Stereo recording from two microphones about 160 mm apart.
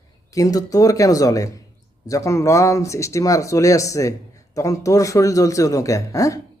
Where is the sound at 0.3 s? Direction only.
20° left (ahead or behind).